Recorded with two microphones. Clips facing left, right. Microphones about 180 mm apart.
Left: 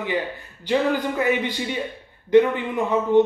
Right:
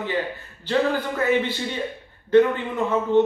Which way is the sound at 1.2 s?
15° left (ahead or behind).